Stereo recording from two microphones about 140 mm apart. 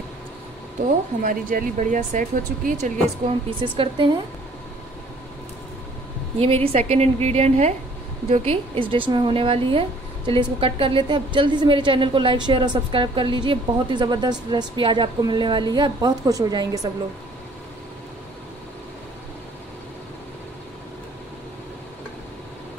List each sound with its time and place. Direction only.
1.2 s speech: 75° right (ahead or behind)
3.4 s speech: 35° right (ahead or behind)
6.4 s a woman's voice: 45° right (ahead or behind); by 16.9 s 25° right (ahead or behind)